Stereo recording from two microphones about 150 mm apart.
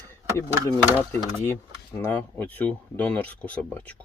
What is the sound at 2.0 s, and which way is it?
Speech, 10° left (ahead or behind).